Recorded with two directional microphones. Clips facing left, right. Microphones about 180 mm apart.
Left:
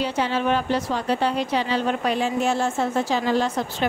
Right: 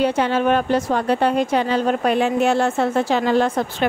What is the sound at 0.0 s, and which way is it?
A woman's voice, 55° right (ahead or behind).